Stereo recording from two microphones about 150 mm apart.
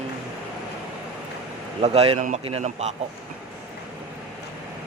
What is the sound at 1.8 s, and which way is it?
Speech, 40° right (ahead or behind).